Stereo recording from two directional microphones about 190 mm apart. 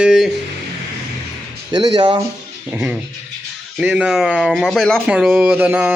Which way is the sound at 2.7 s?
5° right (ahead or behind).